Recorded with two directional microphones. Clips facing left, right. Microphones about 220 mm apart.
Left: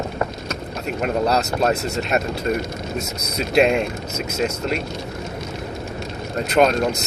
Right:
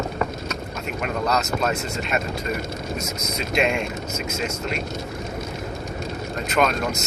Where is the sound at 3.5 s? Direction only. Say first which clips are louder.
Left 6 dB; 40° left (ahead or behind).